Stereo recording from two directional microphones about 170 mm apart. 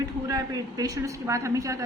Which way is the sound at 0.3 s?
20° right (ahead or behind).